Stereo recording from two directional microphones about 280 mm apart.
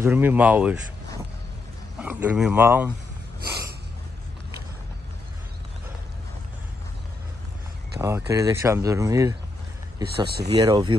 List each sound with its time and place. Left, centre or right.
0.0 s speech: centre
2.0 s speech: centre
8.0 s speech: centre
10.0 s speech: right
10.6 s speech: centre